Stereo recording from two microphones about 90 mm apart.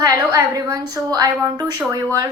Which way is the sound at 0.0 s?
35° right (ahead or behind).